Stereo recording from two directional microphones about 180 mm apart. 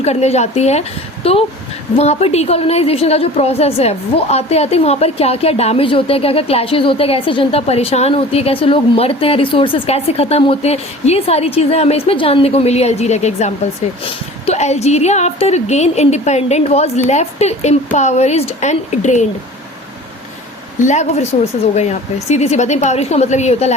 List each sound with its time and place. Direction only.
0.0 s a woman's voice: 35° left (ahead or behind)
20.7 s a woman's voice: 40° left (ahead or behind)